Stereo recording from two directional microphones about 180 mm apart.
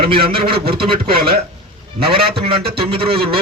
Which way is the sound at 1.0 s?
60° right (ahead or behind).